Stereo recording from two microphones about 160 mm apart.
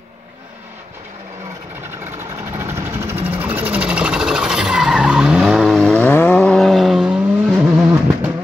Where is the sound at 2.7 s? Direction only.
15° right (ahead or behind).